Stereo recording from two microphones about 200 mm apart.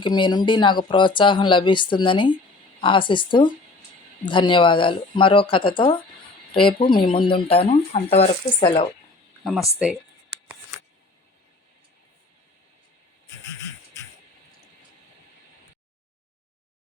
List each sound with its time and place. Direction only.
0.0 s speech: 20° left (ahead or behind)
9.4 s speech: centre (ahead or behind)